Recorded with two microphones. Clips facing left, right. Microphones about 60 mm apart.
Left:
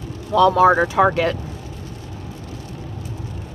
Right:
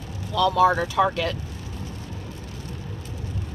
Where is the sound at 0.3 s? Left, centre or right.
Left.